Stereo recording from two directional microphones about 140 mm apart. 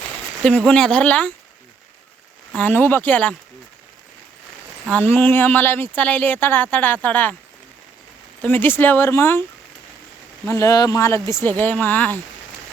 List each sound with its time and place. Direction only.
0.4 s speech: 5° left (ahead or behind)
2.5 s speech: 10° left (ahead or behind)
4.9 s speech: 10° left (ahead or behind)
8.4 s speech: 15° left (ahead or behind)
10.4 s speech: 20° left (ahead or behind)